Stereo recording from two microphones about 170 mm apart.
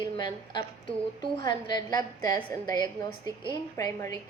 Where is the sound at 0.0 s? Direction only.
25° left (ahead or behind).